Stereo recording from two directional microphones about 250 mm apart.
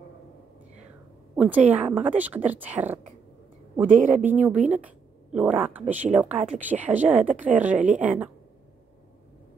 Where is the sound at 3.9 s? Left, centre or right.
Right.